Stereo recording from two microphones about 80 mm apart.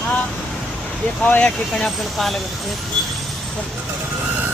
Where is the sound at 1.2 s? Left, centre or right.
Left.